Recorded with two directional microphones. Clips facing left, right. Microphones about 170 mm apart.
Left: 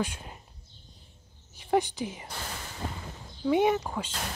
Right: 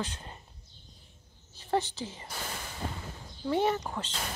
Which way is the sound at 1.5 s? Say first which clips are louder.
Left 4 dB; 15° left (ahead or behind).